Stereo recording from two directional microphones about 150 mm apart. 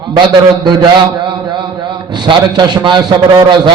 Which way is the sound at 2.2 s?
30° right (ahead or behind).